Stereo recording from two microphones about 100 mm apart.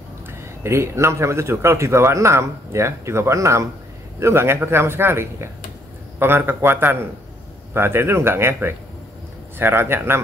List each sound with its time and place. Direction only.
0.3 s speech: 25° right (ahead or behind)